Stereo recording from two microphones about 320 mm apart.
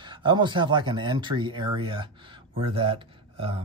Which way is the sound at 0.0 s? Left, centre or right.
Centre.